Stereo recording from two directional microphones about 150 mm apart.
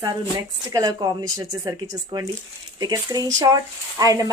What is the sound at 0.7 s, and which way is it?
Speech, 25° right (ahead or behind).